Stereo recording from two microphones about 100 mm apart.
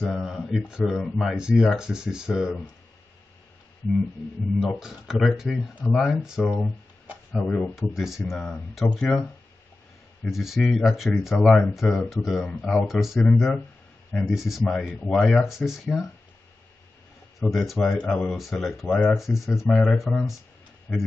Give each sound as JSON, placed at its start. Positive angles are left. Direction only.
{"t": 0.0, "sound": "speech", "side_deg": 0}
{"t": 0.9, "sound": "speech", "side_deg": 5}
{"t": 1.3, "sound": "speech", "side_deg": -5}
{"t": 4.6, "sound": "speech", "side_deg": -5}
{"t": 7.4, "sound": "speech", "side_deg": 10}
{"t": 7.7, "sound": "speech", "side_deg": 0}
{"t": 13.2, "sound": "speech", "side_deg": 10}
{"t": 14.1, "sound": "speech", "side_deg": 0}
{"t": 17.4, "sound": "speech", "side_deg": 0}
{"t": 18.3, "sound": "speech", "side_deg": 0}
{"t": 18.9, "sound": "speech", "side_deg": 15}
{"t": 19.1, "sound": "speech", "side_deg": 0}
{"t": 19.7, "sound": "speech", "side_deg": 10}